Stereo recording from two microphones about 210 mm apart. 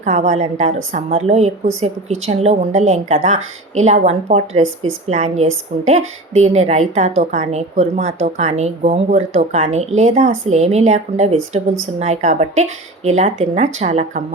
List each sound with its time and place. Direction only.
0.0 s a woman's voice: 35° right (ahead or behind)